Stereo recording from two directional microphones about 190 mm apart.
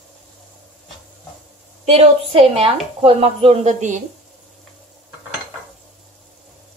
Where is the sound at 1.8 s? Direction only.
30° right (ahead or behind).